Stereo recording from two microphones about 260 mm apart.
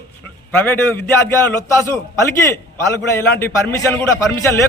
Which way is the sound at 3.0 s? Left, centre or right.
Centre.